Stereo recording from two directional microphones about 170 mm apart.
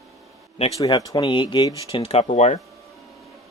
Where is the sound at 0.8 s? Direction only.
25° left (ahead or behind); by 2.6 s 45° left (ahead or behind).